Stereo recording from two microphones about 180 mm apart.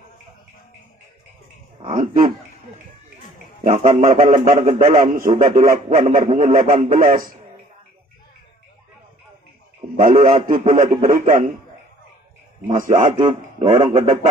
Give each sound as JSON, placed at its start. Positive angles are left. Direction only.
{"t": 1.9, "sound": "a man's voice", "side_deg": -45}
{"t": 3.6, "sound": "a man's voice", "side_deg": -40}
{"t": 9.9, "sound": "a man's voice", "side_deg": -50}
{"t": 12.6, "sound": "a man's voice", "side_deg": -45}
{"t": 13.3, "sound": "a man's voice", "side_deg": -30}